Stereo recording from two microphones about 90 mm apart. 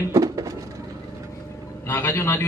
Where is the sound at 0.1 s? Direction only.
40° right (ahead or behind).